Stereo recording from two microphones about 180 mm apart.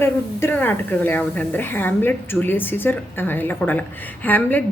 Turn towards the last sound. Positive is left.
turn(degrees=10)  # may be behind; listen again after turning